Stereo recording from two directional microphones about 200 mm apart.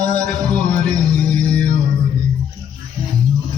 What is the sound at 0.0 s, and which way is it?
Music, 20° right (ahead or behind).